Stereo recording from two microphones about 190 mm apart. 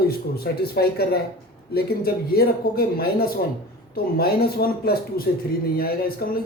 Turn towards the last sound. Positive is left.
turn(degrees=55)  # may be behind; listen again after turning